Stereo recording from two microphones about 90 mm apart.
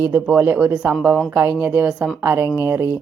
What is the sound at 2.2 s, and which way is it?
Speech, 25° right (ahead or behind).